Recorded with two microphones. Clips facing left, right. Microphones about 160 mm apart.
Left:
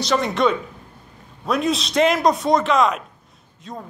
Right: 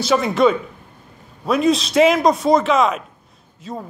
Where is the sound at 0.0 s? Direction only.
5° right (ahead or behind).